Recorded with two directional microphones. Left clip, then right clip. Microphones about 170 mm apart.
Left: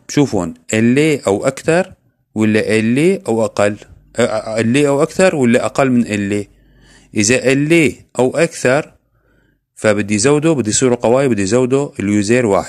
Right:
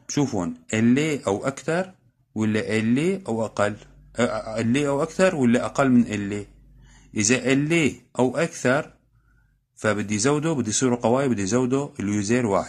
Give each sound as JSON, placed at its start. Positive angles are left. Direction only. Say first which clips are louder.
{"t": 0.0, "sound": "speech", "louder": "left 10 dB", "side_deg": 35}